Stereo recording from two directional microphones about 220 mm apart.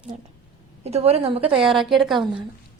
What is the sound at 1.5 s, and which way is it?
Speech, 5° right (ahead or behind).